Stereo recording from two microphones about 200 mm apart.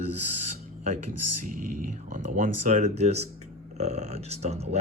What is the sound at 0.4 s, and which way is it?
Speech, 40° right (ahead or behind).